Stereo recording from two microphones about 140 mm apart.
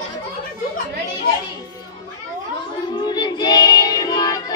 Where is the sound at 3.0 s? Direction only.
30° left (ahead or behind).